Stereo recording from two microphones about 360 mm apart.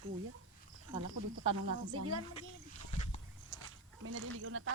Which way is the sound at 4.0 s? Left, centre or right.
Right.